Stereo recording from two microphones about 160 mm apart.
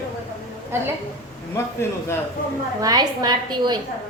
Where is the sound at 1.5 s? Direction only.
15° left (ahead or behind).